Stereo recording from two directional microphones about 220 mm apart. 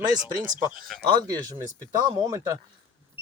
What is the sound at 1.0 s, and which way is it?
Speech, 20° right (ahead or behind).